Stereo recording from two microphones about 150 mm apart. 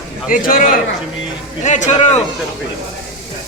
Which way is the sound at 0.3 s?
65° left (ahead or behind).